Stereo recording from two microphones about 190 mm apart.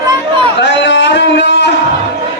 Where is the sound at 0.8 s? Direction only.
65° left (ahead or behind).